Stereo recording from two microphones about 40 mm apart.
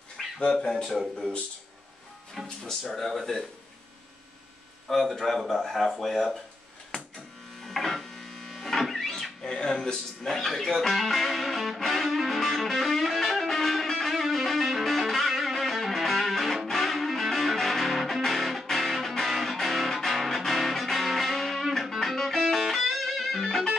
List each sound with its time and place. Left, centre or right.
0.2 s a sound: centre
0.6 s speech: centre
2.4 s a man's voice: centre
4.8 s a man's voice: centre
6.9 s a sound: left
7.6 s printer: centre
9.4 s music: centre
9.9 s music: centre